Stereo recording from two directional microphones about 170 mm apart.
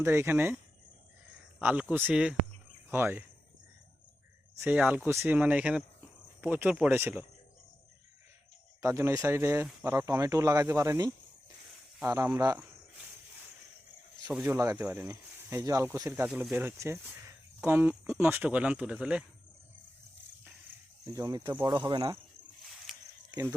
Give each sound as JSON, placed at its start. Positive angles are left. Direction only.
{"t": 0.0, "sound": "speech", "side_deg": -15}
{"t": 4.6, "sound": "speech", "side_deg": -10}
{"t": 8.8, "sound": "speech", "side_deg": -15}
{"t": 14.3, "sound": "speech", "side_deg": -10}
{"t": 21.1, "sound": "speech", "side_deg": -20}
{"t": 22.9, "sound": "a sound", "side_deg": -5}
{"t": 23.3, "sound": "speech", "side_deg": -20}